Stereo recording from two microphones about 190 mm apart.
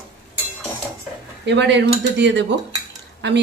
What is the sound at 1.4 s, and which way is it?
Speech, 65° right (ahead or behind).